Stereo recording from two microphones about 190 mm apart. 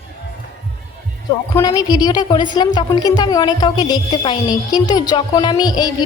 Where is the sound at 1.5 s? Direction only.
20° left (ahead or behind).